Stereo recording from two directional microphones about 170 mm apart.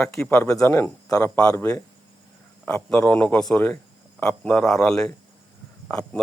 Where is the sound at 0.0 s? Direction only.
10° left (ahead or behind).